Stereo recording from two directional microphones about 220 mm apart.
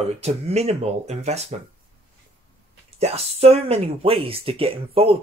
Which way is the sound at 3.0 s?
30° right (ahead or behind).